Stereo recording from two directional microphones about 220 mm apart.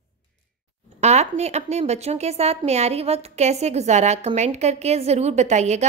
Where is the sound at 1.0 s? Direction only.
30° right (ahead or behind).